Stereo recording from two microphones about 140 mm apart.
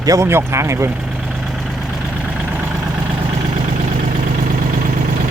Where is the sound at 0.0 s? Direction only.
20° right (ahead or behind).